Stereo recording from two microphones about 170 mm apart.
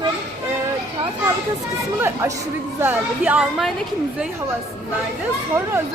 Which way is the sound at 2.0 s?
15° right (ahead or behind).